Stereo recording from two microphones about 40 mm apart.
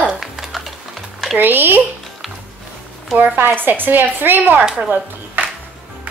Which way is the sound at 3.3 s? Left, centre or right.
Right.